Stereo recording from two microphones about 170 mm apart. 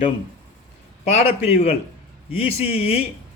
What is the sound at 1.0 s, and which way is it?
Speech, 40° left (ahead or behind).